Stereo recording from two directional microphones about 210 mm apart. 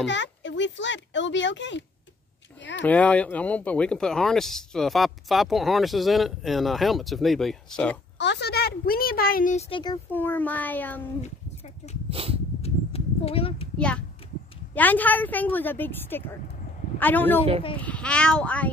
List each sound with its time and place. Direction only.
0.0 s speech: 60° left (ahead or behind)
2.7 s speech: 5° left (ahead or behind)
8.2 s speech: 55° left (ahead or behind); by 9.7 s 40° left (ahead or behind)
9.7 s speech: 25° left (ahead or behind)
10.1 s a woman's voice: 10° left (ahead or behind)
12.1 s a sound: 25° right (ahead or behind)
12.6 s a sound: 30° left (ahead or behind)
13.7 s a woman's voice: 5° left (ahead or behind)